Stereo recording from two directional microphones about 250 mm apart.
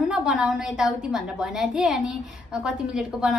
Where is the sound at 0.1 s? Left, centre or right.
Centre.